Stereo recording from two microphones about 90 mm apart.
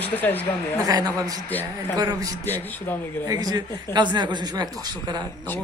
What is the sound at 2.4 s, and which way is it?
Speech, 20° left (ahead or behind).